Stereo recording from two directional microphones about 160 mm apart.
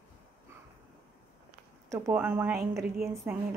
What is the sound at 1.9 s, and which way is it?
A woman's voice, 10° right (ahead or behind).